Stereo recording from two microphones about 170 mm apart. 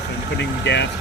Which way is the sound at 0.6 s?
90° left.